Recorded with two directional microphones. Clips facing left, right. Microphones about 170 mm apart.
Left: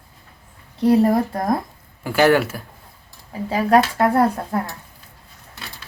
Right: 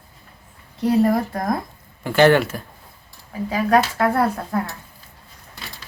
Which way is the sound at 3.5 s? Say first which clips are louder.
Left 2 dB; 30° left (ahead or behind).